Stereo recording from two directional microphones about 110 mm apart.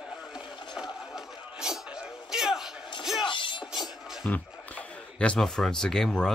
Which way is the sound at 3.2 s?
45° left (ahead or behind).